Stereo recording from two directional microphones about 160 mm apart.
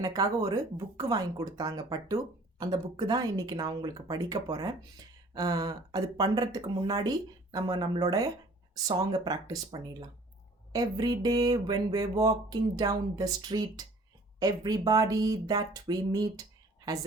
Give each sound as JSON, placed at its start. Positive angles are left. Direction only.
{"t": 0.0, "sound": "speech", "side_deg": -25}